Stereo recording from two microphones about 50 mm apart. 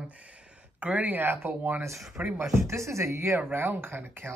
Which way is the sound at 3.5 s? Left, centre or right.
Right.